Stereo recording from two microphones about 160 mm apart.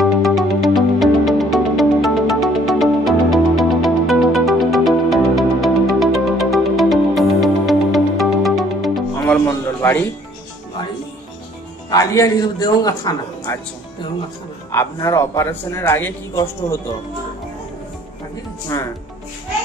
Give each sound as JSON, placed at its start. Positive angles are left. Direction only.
{"t": 0.0, "sound": "music", "side_deg": 0}
{"t": 9.8, "sound": "music", "side_deg": 15}
{"t": 11.9, "sound": "a man's voice", "side_deg": 20}
{"t": 14.7, "sound": "a man's voice", "side_deg": 20}